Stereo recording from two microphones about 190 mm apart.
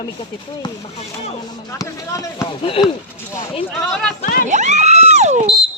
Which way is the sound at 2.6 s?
30° left (ahead or behind).